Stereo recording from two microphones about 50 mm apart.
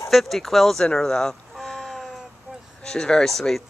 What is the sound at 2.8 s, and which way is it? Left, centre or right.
Speech, centre.